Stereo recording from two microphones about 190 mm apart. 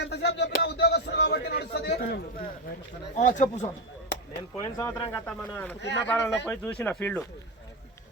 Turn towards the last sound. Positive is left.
turn(degrees=10)  # may be behind; listen again after turning